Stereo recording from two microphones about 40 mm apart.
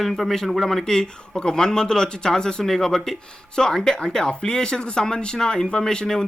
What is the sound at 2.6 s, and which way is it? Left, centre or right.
Speech, centre.